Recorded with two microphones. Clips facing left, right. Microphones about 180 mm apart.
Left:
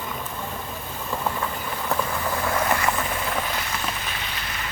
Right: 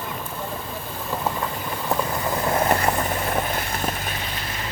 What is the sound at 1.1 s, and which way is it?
Vehicle, 10° right (ahead or behind).